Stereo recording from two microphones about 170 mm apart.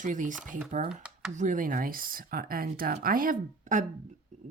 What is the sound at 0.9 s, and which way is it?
Speech, 5° right (ahead or behind).